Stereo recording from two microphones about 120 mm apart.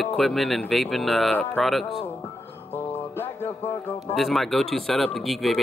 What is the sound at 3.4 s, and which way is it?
Music, 20° left (ahead or behind).